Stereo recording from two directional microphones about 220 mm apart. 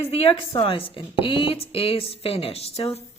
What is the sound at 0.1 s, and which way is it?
Speech, 25° left (ahead or behind).